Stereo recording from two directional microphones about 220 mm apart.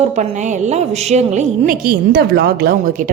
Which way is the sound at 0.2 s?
35° right (ahead or behind).